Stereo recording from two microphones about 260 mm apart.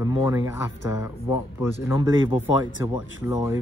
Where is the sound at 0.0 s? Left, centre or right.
Centre.